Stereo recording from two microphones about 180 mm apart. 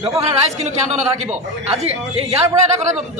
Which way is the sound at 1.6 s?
35° right (ahead or behind).